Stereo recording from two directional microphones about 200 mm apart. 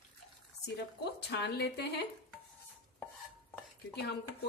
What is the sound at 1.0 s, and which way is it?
Speech, 55° left (ahead or behind).